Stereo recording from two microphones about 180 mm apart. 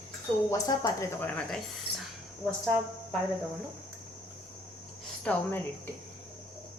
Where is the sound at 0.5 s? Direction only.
20° left (ahead or behind).